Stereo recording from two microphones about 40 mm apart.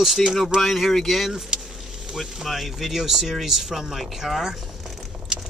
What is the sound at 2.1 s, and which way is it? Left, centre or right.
Speech, centre.